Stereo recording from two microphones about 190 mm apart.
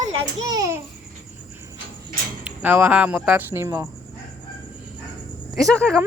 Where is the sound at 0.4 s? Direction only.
20° right (ahead or behind).